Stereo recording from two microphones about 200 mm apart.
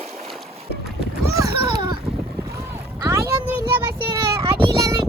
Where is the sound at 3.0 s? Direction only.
15° right (ahead or behind).